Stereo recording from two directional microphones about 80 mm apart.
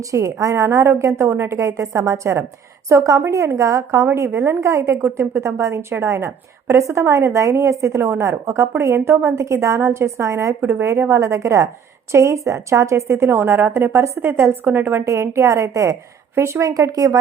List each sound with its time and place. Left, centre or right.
0.0 s a woman's voice: right
15.0 s a woman's voice: right